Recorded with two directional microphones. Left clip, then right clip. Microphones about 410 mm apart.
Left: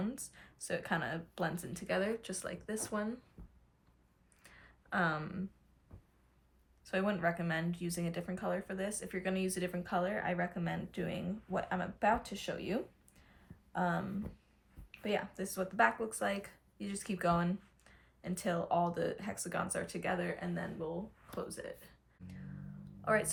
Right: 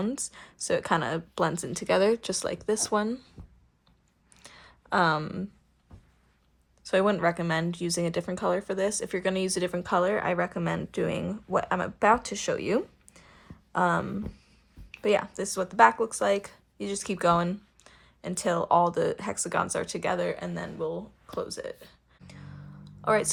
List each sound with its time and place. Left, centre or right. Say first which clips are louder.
0.3 s speech: right 12 dB; centre
3.4 s a sound: right 7 dB; centre
6.8 s speech: right 10 dB; centre
22.8 s music: right 8 dB; centre